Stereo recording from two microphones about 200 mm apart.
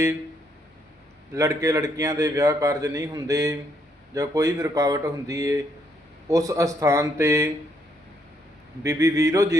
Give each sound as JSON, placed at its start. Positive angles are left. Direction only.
{"t": 1.3, "sound": "a man's voice", "side_deg": -15}
{"t": 8.8, "sound": "a man's voice", "side_deg": -15}